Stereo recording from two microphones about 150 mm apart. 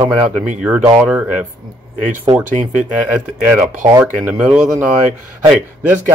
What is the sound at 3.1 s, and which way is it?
Speech, 15° right (ahead or behind).